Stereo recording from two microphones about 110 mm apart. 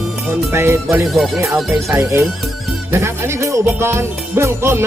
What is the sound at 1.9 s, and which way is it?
Music, 20° right (ahead or behind).